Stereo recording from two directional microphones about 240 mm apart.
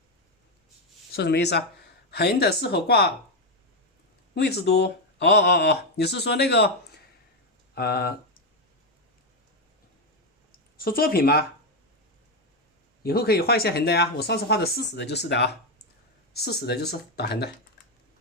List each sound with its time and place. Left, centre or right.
1.1 s speech: left
4.4 s speech: left
10.8 s speech: left
13.0 s speech: left